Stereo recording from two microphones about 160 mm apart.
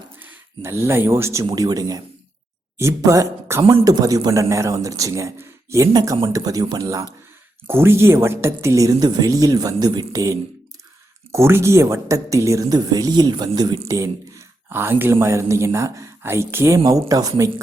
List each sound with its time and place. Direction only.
0.2 s speech: 15° right (ahead or behind)